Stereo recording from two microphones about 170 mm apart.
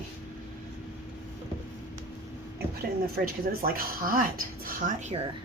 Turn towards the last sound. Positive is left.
turn(degrees=-50)  # may be behind; listen again after turning